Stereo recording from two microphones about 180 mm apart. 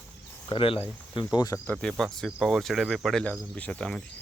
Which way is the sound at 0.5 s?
30° left (ahead or behind).